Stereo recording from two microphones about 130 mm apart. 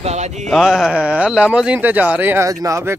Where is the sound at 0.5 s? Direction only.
Centre (ahead or behind).